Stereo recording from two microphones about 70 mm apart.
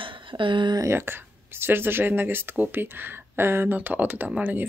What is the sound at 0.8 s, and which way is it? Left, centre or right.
Speech, right.